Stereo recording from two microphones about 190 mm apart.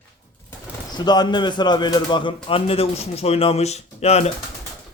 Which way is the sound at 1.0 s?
20° left (ahead or behind).